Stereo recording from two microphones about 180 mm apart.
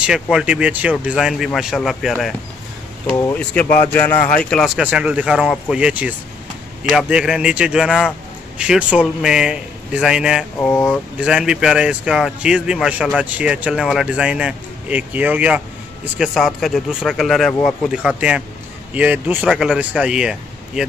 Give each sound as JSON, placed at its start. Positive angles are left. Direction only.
{"t": 0.0, "sound": "speech", "side_deg": -5}
{"t": 3.6, "sound": "a man's voice", "side_deg": 50}
{"t": 3.9, "sound": "speech", "side_deg": 10}
{"t": 10.6, "sound": "speech", "side_deg": 10}
{"t": 11.1, "sound": "speech", "side_deg": -5}